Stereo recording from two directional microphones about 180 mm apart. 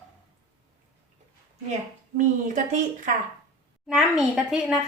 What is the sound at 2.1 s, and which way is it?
Speech, 45° right (ahead or behind).